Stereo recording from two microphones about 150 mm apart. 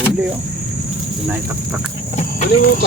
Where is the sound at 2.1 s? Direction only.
55° left (ahead or behind).